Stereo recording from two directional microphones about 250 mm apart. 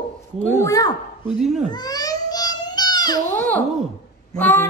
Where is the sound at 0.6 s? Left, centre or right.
Centre.